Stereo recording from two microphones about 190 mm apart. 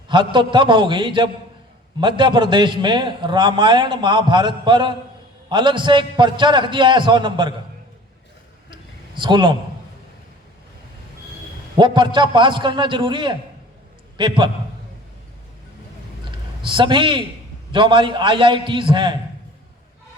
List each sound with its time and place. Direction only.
0.1 s a man's voice: 25° right (ahead or behind)
8.7 s a sound: 25° right (ahead or behind)
11.8 s a man's voice: 25° right (ahead or behind)
16.6 s a man's voice: 25° right (ahead or behind)